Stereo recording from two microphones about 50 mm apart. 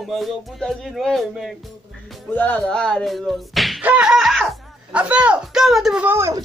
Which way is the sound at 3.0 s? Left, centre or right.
Centre.